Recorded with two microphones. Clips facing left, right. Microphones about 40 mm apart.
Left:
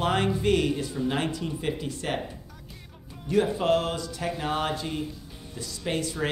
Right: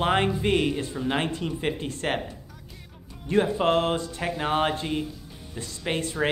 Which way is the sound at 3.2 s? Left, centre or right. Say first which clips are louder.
Right 1 dB; right.